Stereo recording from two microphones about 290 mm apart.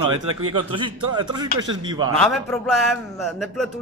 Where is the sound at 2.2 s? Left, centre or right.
Centre.